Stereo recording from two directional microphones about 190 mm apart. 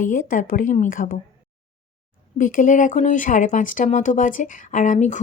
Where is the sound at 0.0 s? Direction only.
45° left (ahead or behind).